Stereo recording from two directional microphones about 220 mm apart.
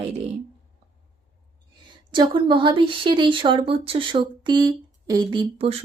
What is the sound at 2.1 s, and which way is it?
Speech, 20° right (ahead or behind).